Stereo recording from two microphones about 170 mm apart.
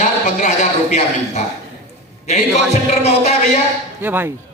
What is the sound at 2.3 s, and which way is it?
A man's voice, 40° left (ahead or behind).